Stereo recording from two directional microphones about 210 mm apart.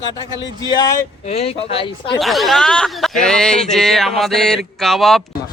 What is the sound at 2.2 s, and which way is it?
Speech, centre (ahead or behind).